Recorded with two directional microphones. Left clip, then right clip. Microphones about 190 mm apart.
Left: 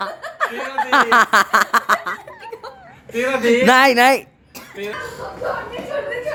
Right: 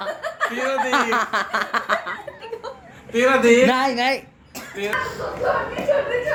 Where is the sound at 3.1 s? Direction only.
10° right (ahead or behind).